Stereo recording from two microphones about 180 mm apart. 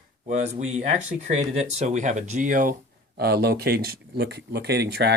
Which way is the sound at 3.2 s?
60° right (ahead or behind).